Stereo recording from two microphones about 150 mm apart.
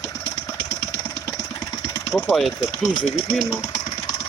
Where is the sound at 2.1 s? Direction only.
Centre (ahead or behind).